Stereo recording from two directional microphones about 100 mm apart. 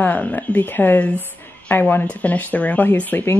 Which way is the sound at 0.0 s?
15° left (ahead or behind).